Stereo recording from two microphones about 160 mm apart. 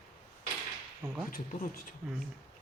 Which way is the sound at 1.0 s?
15° right (ahead or behind).